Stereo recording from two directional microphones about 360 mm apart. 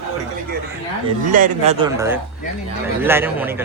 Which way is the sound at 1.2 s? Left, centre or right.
Right.